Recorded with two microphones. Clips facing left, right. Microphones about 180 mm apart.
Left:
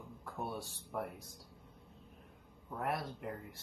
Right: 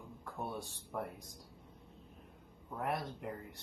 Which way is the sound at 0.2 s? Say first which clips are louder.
Even; centre (ahead or behind).